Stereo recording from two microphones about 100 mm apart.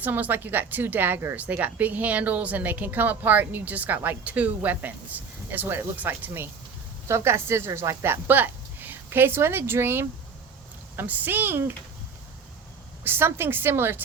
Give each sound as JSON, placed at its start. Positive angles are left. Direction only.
{"t": 0.0, "sound": "a woman's voice", "side_deg": -20}
{"t": 13.1, "sound": "a woman's voice", "side_deg": -25}